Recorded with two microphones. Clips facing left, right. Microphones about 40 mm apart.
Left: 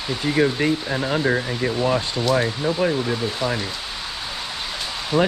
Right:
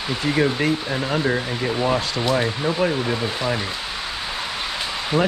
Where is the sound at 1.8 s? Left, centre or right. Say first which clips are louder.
Right 1 dB; centre.